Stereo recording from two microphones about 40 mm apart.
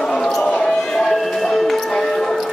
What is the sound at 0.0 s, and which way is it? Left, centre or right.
Basketball bounce, centre.